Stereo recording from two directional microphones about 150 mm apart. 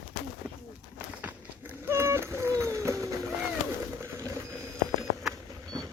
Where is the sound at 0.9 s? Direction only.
10° right (ahead or behind).